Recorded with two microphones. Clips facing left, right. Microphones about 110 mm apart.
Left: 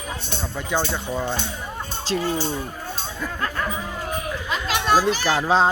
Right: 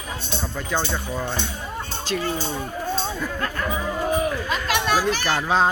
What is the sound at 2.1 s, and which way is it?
Fowl, 30° left (ahead or behind).